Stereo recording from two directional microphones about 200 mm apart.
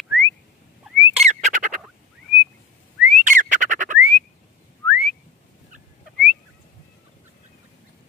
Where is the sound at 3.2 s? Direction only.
40° right (ahead or behind).